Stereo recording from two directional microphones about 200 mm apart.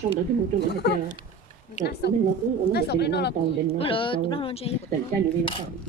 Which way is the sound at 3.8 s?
25° left (ahead or behind).